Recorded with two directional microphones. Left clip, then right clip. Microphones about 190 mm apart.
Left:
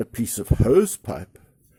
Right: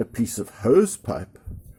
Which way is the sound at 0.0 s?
40° left (ahead or behind).